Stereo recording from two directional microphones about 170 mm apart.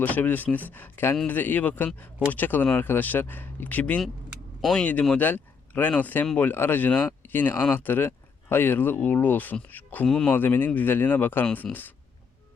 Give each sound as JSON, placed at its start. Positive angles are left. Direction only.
{"t": 0.0, "sound": "speech", "side_deg": 10}